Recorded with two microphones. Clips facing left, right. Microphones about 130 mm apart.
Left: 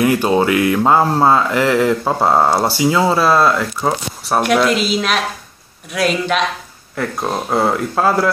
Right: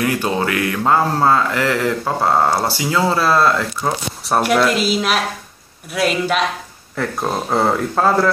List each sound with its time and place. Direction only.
0.0 s speech: 25° left (ahead or behind)
4.2 s speech: centre (ahead or behind)